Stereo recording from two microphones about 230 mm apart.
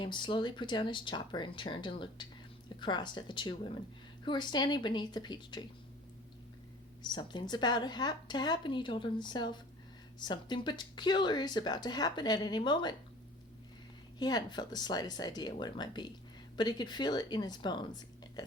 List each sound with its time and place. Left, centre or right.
0.0 s speech: left
7.0 s speech: centre
14.2 s speech: centre